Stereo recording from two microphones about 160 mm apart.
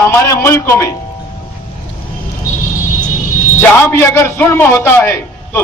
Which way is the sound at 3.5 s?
15° left (ahead or behind).